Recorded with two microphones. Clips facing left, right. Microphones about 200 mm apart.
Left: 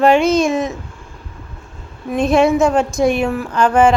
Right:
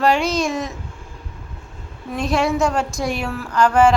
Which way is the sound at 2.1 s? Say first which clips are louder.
Left 7 dB; 20° left (ahead or behind).